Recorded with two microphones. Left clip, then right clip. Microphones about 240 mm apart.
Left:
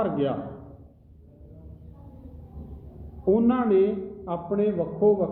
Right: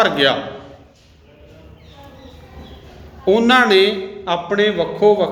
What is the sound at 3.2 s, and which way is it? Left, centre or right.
A man's voice, right.